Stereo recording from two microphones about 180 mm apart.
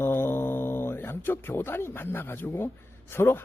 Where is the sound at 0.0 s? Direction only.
10° left (ahead or behind).